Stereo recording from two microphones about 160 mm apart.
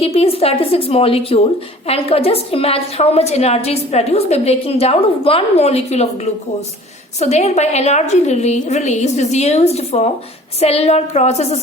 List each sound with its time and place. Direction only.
0.0 s a woman's voice: 40° left (ahead or behind)
7.2 s a woman's voice: 45° left (ahead or behind)